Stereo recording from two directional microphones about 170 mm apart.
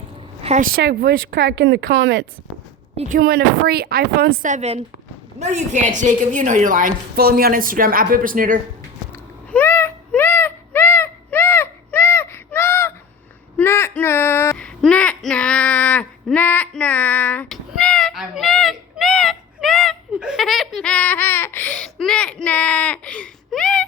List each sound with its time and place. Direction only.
0.4 s a woman's voice: 45° right (ahead or behind)
0.8 s a woman's voice: 75° right (ahead or behind)
3.2 s a woman's voice: 65° right (ahead or behind)
9.5 s a sound: 10° left (ahead or behind)